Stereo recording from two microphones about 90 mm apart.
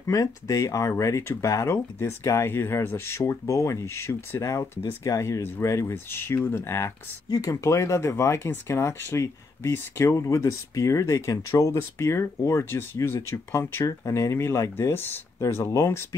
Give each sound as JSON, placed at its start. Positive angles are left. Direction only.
{"t": 0.0, "sound": "speech", "side_deg": 40}
{"t": 7.2, "sound": "speech", "side_deg": 45}
{"t": 7.6, "sound": "speech", "side_deg": 35}